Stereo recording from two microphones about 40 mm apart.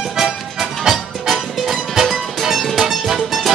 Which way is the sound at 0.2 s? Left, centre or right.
Centre.